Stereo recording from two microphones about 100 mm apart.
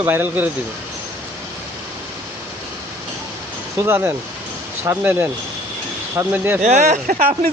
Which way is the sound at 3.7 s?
25° right (ahead or behind).